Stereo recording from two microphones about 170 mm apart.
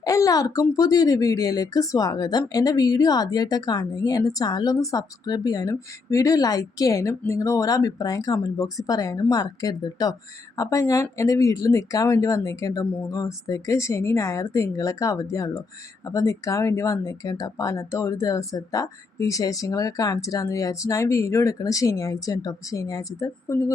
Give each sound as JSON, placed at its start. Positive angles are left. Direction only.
{"t": 0.0, "sound": "speech", "side_deg": 20}